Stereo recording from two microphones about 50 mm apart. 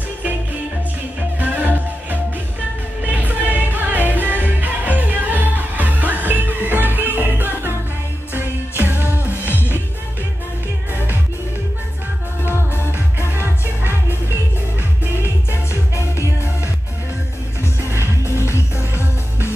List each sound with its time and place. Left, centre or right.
1.4 s music: right
3.0 s music: right
8.4 s music: right
9.5 s music: left
13.2 s music: right
18.2 s music: left